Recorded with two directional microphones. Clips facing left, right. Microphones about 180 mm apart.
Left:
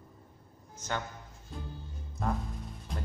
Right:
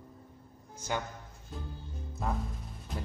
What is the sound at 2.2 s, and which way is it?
Music, 5° right (ahead or behind).